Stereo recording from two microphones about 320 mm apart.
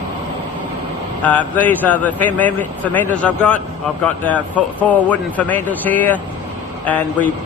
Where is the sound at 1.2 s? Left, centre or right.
Centre.